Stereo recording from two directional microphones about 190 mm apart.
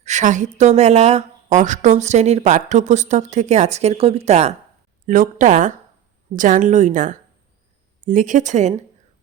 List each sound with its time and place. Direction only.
0.0 s a woman's voice: 40° right (ahead or behind)